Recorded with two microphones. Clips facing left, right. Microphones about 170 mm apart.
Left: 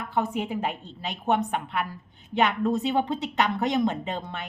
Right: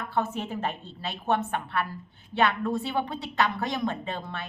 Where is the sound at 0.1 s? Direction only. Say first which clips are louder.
Left 3 dB; 15° left (ahead or behind).